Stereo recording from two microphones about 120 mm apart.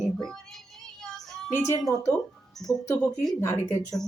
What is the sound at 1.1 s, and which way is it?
Child singing, 5° left (ahead or behind).